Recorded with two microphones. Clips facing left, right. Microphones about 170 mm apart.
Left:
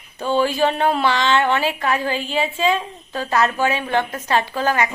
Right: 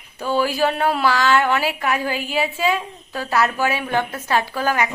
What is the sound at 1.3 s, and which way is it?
A woman's voice, 5° right (ahead or behind).